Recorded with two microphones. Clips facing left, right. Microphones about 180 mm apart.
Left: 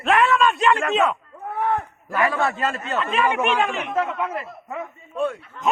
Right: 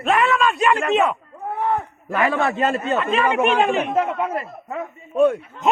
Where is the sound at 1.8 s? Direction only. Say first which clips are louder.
Right 1 dB; 20° right (ahead or behind).